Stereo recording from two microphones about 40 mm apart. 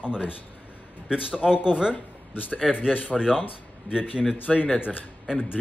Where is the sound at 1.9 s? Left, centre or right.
Left.